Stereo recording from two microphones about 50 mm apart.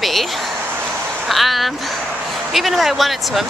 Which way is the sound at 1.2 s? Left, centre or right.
Centre.